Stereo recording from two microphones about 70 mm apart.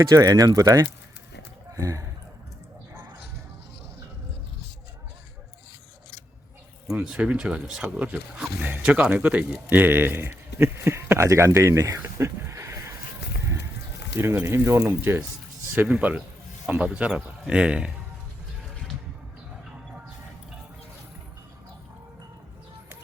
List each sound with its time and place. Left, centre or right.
0.0 s speech: right
7.0 s speech: centre; by 12.0 s right
12.0 s a sound: right
14.2 s speech: right
15.9 s speech: right